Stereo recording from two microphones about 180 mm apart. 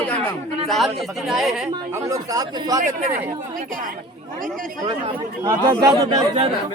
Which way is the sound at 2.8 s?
45° right (ahead or behind).